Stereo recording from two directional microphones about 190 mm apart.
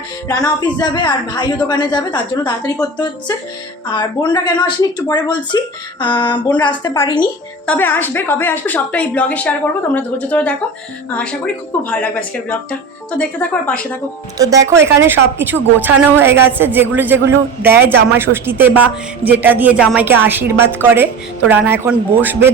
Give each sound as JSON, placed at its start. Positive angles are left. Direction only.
{"t": 0.3, "sound": "speech", "side_deg": 20}
{"t": 7.7, "sound": "a woman's voice", "side_deg": 10}
{"t": 11.8, "sound": "a woman's voice", "side_deg": 5}
{"t": 14.3, "sound": "a woman's voice", "side_deg": -20}